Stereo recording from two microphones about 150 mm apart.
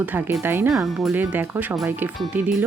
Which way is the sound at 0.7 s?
Centre (ahead or behind).